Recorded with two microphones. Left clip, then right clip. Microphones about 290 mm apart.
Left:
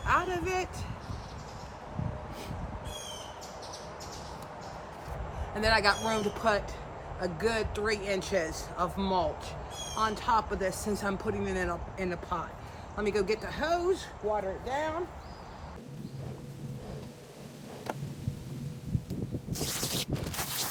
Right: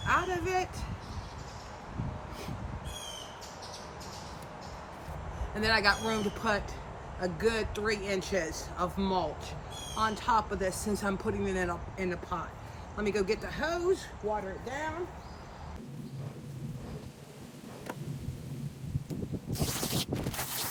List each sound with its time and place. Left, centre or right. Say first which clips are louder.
0.0 s vehicle: left 1 dB; centre
5.5 s speech: left 1 dB; centre